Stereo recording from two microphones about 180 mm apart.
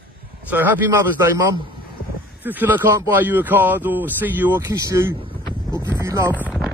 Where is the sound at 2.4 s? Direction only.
10° right (ahead or behind).